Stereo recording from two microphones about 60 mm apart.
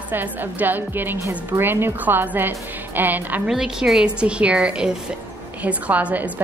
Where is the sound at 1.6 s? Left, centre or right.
Right.